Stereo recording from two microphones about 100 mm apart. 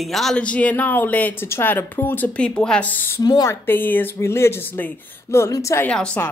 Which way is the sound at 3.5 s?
20° left (ahead or behind).